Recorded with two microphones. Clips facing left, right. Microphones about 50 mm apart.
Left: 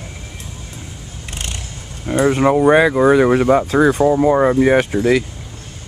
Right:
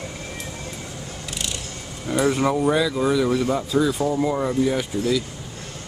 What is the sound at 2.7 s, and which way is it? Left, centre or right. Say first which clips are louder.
Speech: left 9 dB; left.